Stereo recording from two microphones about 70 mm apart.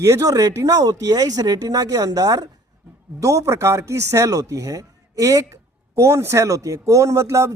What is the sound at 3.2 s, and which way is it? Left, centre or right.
Speech, right.